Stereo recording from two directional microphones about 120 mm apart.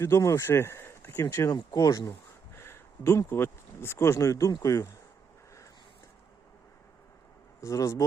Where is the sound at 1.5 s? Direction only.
30° left (ahead or behind).